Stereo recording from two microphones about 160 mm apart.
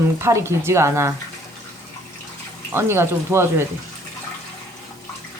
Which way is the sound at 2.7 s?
15° right (ahead or behind).